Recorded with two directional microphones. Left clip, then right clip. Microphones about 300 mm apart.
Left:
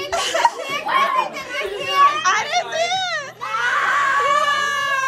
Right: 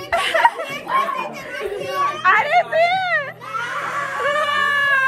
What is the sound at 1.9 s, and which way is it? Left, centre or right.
Children playing, centre.